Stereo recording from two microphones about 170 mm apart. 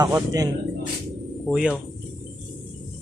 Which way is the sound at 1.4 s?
5° right (ahead or behind).